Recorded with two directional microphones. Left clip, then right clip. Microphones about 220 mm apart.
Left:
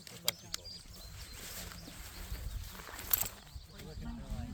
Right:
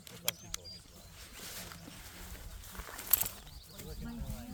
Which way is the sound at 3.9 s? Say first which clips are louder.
Right 1 dB; 45° right (ahead or behind).